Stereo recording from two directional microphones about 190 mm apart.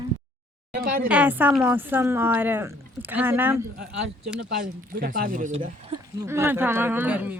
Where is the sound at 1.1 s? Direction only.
10° right (ahead or behind).